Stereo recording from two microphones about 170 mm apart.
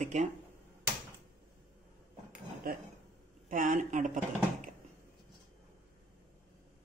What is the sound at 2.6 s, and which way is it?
A woman's voice, 60° right (ahead or behind).